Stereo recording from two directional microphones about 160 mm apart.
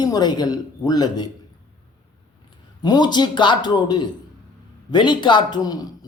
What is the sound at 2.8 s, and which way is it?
Speech, 25° left (ahead or behind).